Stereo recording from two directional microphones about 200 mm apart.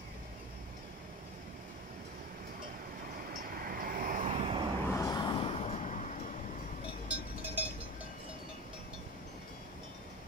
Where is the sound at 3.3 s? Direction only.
45° right (ahead or behind); by 4.6 s 30° right (ahead or behind).